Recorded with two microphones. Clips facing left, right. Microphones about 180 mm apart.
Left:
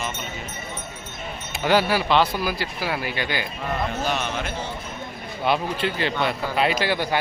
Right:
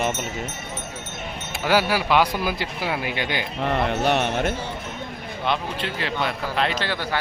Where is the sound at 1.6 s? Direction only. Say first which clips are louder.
Left 1 dB; 10° right (ahead or behind).